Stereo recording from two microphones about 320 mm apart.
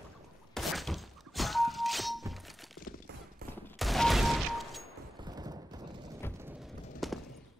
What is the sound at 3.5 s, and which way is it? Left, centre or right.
Fusillade, centre.